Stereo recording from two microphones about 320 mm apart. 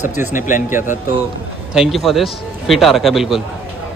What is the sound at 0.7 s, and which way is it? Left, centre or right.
A man's voice, centre.